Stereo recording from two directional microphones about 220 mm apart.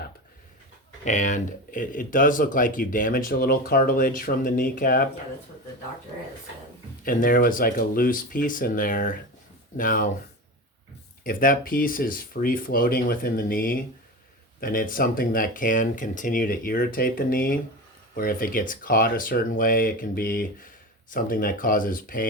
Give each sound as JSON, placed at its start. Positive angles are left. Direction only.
{"t": 1.0, "sound": "speech", "side_deg": 35}
{"t": 7.0, "sound": "speech", "side_deg": 40}
{"t": 11.2, "sound": "speech", "side_deg": 40}